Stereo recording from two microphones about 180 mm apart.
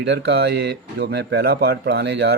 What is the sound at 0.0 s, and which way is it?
Speech, 70° right (ahead or behind).